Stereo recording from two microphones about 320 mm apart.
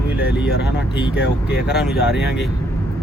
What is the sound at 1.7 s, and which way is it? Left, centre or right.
Speech, centre.